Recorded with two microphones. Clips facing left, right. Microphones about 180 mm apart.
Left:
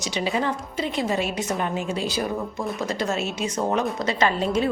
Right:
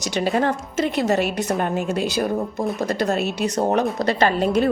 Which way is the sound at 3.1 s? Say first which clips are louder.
Right 4 dB; 60° right (ahead or behind).